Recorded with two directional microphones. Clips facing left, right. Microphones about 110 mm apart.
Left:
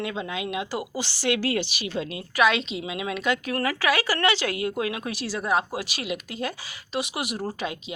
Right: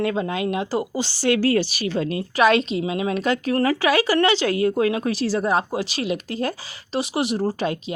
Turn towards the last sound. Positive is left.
turn(degrees=-35)  # may be behind; listen again after turning